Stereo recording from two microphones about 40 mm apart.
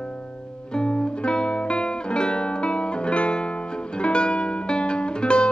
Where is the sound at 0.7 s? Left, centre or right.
Left.